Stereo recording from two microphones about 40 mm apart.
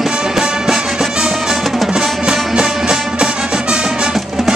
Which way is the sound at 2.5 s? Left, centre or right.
Centre.